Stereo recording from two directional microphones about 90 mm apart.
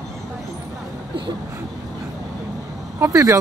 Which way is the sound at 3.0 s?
35° right (ahead or behind).